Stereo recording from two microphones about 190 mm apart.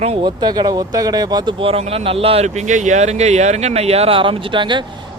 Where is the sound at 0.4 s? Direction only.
20° right (ahead or behind).